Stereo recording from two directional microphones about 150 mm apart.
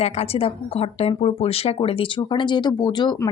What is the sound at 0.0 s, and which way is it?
Speech, 40° left (ahead or behind).